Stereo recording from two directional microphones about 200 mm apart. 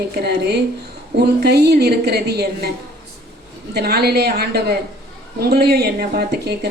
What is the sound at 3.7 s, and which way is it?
Speech, 55° right (ahead or behind).